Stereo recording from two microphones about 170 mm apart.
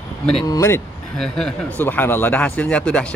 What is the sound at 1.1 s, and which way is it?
Speech, 5° left (ahead or behind).